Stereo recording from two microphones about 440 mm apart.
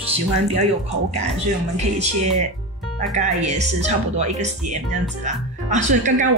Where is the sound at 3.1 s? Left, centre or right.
Centre.